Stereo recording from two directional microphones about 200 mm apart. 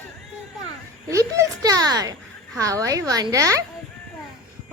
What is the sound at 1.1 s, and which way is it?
A woman's voice, 15° right (ahead or behind).